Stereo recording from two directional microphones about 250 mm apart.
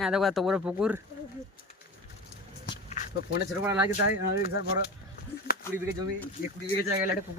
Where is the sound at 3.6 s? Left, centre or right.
Centre.